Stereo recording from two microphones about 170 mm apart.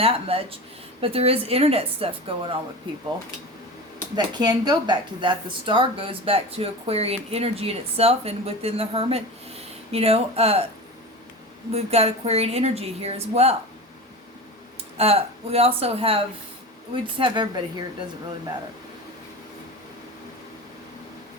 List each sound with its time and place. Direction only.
0.0 s speech: 35° right (ahead or behind)
4.1 s speech: 25° right (ahead or behind)
11.7 s speech: 35° right (ahead or behind)
14.9 s speech: 35° right (ahead or behind)